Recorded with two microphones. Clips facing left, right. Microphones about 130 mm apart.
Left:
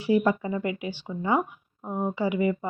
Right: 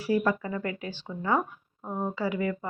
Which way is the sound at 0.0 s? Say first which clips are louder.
Left 3 dB; 20° left (ahead or behind).